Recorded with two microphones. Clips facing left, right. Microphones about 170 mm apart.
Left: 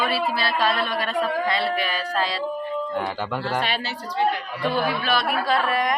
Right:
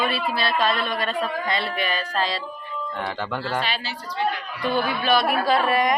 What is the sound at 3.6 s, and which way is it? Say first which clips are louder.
Speech: left 2 dB; 55° left (ahead or behind).